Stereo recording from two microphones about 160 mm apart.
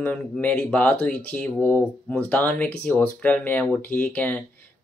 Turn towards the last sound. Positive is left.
turn(degrees=10)  # may be behind; listen again after turning